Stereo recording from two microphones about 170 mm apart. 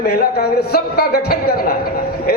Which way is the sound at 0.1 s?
70° left (ahead or behind).